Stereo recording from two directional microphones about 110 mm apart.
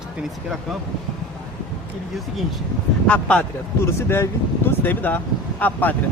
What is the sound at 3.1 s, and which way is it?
Speech, 10° left (ahead or behind).